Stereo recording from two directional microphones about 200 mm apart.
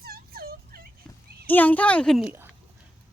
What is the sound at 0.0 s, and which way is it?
Turkey, 50° right (ahead or behind).